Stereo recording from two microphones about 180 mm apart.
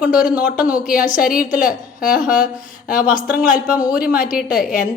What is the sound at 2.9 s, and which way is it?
A woman's voice, 5° right (ahead or behind).